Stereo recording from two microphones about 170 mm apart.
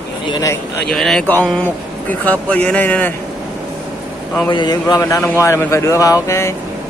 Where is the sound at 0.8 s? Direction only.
Centre (ahead or behind).